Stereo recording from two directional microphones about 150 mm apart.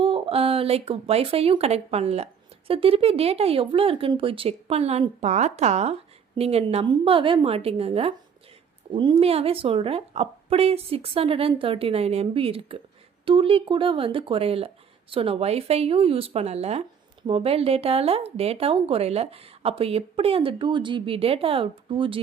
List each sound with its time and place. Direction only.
0.0 s speech: 40° right (ahead or behind)